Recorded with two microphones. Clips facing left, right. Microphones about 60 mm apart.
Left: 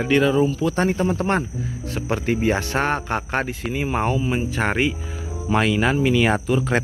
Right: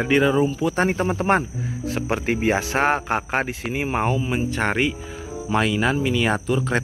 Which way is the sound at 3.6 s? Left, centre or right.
Right.